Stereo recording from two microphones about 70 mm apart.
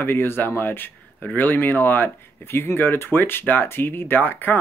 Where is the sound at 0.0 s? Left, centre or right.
Left.